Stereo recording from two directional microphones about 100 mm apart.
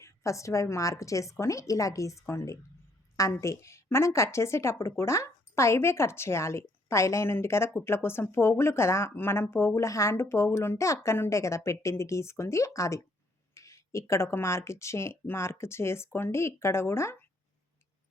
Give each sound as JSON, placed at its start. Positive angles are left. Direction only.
{"t": 0.0, "sound": "a woman's voice", "side_deg": 30}